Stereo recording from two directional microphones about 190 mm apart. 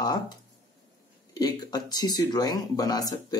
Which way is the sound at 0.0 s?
20° left (ahead or behind).